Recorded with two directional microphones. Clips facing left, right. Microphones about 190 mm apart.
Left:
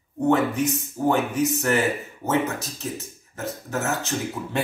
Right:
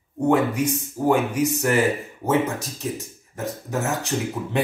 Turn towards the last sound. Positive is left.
turn(degrees=-15)  # may be behind; listen again after turning